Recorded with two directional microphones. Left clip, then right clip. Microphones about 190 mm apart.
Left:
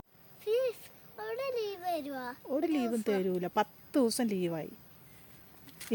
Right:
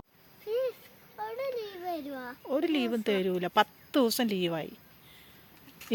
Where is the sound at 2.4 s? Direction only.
Centre (ahead or behind).